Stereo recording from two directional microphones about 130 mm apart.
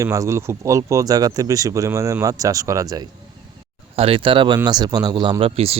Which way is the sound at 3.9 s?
45° right (ahead or behind).